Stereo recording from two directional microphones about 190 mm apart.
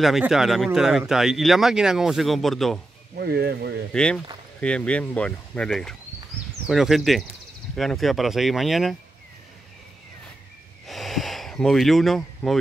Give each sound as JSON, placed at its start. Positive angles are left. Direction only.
{"t": 0.0, "sound": "speech", "side_deg": 0}
{"t": 3.2, "sound": "speech", "side_deg": -55}
{"t": 3.9, "sound": "speech", "side_deg": 5}
{"t": 10.9, "sound": "a sound", "side_deg": 0}